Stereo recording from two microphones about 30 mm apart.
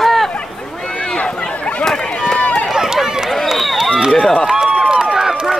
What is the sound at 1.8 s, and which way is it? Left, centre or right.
Run, centre.